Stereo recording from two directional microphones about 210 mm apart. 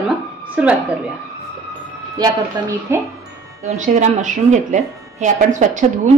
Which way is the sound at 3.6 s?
35° right (ahead or behind).